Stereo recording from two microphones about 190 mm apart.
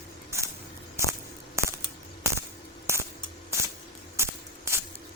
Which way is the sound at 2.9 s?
15° right (ahead or behind).